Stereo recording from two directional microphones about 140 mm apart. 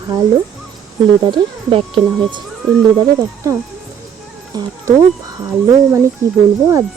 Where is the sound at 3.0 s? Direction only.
20° right (ahead or behind).